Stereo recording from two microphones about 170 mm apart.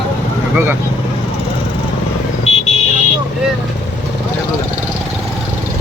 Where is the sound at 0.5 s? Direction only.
10° right (ahead or behind).